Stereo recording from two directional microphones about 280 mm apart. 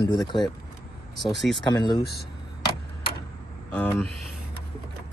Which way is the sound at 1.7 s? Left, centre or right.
Centre.